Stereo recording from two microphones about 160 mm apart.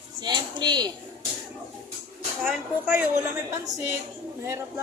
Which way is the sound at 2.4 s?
10° right (ahead or behind).